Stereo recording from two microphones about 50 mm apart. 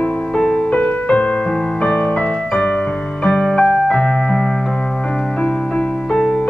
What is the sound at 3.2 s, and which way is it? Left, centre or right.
Music, centre.